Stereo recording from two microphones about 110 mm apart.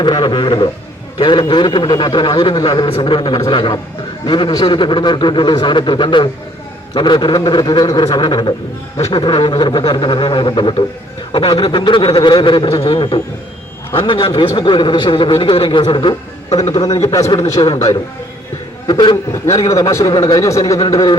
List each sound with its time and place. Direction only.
0.0 s a man's voice: 45° left (ahead or behind)
12.6 s a man's voice: 60° left (ahead or behind)
16.5 s a man's voice: 75° left (ahead or behind)
16.8 s a man's voice: 35° left (ahead or behind)
18.9 s a man's voice: 40° left (ahead or behind)
19.3 s a man's voice: 30° left (ahead or behind)